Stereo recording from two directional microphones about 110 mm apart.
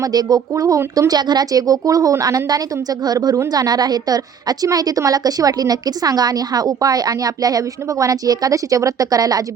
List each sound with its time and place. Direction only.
0.0 s a woman's voice: 35° right (ahead or behind)